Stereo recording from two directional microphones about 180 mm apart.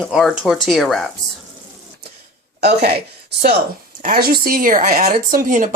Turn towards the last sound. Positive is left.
turn(degrees=-45)  # may be behind; listen again after turning